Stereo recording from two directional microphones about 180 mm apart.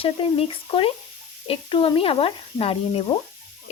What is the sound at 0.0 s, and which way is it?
Speech, 30° left (ahead or behind).